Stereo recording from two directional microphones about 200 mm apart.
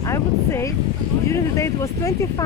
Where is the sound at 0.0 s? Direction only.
15° left (ahead or behind).